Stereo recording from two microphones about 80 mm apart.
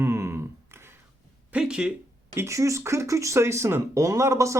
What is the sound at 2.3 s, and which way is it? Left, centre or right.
Speech, right.